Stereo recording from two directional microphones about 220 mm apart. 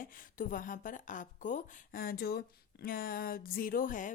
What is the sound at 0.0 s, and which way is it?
Speech, 40° left (ahead or behind).